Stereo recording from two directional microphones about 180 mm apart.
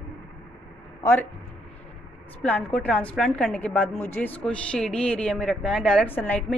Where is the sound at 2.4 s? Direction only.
10° left (ahead or behind).